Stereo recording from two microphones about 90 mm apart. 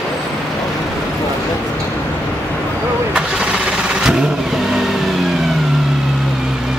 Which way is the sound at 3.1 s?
10° right (ahead or behind).